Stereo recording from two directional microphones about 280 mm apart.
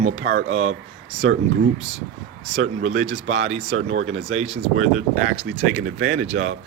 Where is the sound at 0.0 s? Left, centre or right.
Right.